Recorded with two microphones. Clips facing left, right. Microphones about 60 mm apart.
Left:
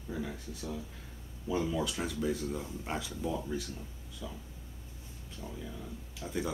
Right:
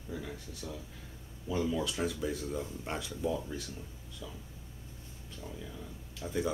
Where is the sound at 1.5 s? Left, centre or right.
Centre.